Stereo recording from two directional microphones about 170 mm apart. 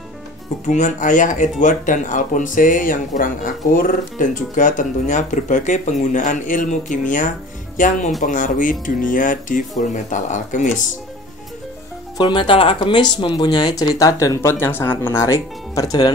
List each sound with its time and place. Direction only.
0.7 s speech: 45° left (ahead or behind)
12.2 s speech: 30° left (ahead or behind)